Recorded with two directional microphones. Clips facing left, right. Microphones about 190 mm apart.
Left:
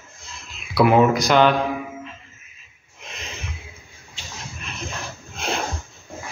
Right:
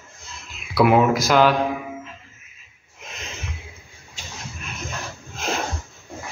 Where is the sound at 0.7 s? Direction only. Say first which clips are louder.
Left 1 dB; centre (ahead or behind).